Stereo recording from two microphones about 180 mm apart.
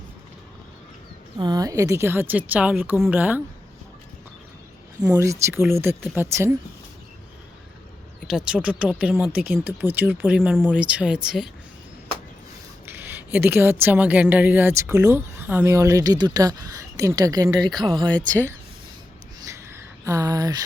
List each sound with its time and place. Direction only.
1.4 s a woman's voice: 20° right (ahead or behind)
5.1 s a woman's voice: 15° right (ahead or behind)
8.3 s a woman's voice: 5° right (ahead or behind)
12.8 s a woman's voice: 10° right (ahead or behind)
19.5 s a sound: 15° right (ahead or behind)